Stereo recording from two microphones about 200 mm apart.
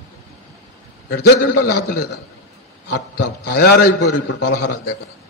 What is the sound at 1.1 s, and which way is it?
Speech, 55° left (ahead or behind).